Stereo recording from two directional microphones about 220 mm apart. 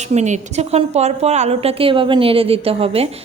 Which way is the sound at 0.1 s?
30° right (ahead or behind).